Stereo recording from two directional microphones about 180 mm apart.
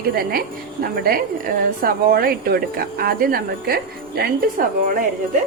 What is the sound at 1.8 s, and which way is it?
Speech, 55° right (ahead or behind).